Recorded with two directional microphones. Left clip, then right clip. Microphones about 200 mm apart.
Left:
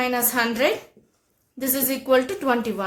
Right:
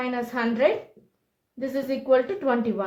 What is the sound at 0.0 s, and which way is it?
A woman's voice, 35° left (ahead or behind).